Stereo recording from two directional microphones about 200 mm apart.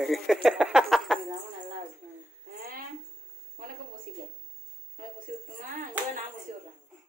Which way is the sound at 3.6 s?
45° right (ahead or behind).